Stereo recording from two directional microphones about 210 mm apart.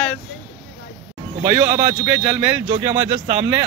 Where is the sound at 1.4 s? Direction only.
15° right (ahead or behind).